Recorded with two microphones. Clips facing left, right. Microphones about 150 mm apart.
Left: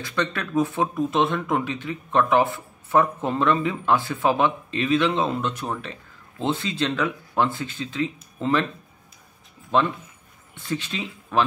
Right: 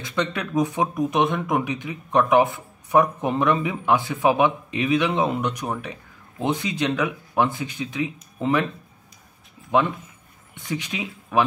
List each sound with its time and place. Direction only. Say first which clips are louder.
0.0 s speech: right 1 dB; 15° right (ahead or behind)
9.7 s speech: right 1 dB; 15° right (ahead or behind)